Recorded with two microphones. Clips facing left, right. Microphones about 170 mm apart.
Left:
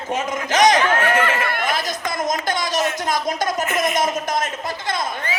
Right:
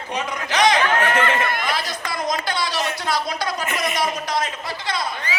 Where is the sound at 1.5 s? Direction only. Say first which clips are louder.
Left 2 dB; 45° left (ahead or behind).